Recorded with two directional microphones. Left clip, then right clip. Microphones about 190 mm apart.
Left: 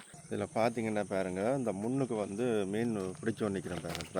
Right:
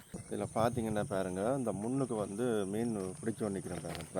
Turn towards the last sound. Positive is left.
turn(degrees=15)  # may be behind; listen again after turning